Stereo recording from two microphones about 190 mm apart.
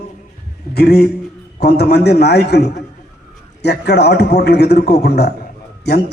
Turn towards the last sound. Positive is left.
turn(degrees=60)  # may be behind; listen again after turning